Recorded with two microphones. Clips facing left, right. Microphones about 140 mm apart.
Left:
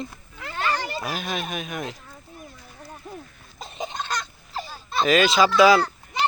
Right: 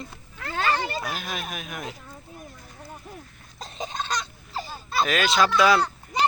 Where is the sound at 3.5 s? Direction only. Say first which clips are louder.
Left 1 dB; 5° left (ahead or behind).